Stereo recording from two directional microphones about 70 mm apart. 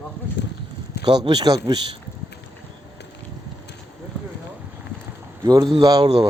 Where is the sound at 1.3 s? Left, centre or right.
Right.